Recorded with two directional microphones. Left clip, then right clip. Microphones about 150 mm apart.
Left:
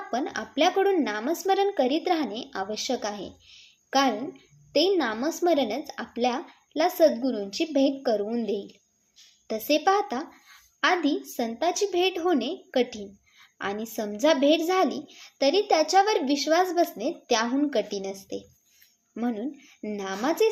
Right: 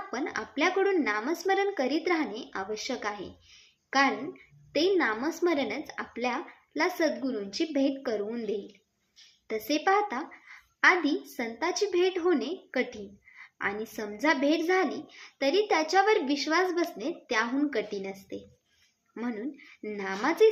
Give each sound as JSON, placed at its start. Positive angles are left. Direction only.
{"t": 0.1, "sound": "a woman's voice", "side_deg": 25}
{"t": 19.8, "sound": "a woman's voice", "side_deg": 30}